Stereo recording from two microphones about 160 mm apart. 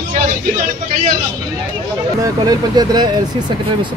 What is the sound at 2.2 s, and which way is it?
Speech, 25° right (ahead or behind).